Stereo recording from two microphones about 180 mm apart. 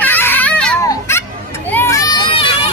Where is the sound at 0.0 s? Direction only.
10° left (ahead or behind).